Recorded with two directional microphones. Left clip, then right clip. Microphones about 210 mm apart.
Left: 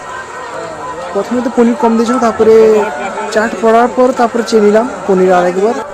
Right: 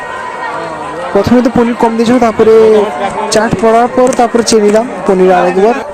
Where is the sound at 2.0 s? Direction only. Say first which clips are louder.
Right 3 dB; 45° right (ahead or behind).